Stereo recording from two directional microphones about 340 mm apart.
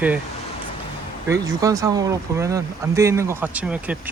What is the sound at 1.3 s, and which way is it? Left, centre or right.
Speech, centre.